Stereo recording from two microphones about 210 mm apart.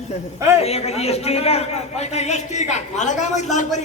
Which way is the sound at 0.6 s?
30° left (ahead or behind).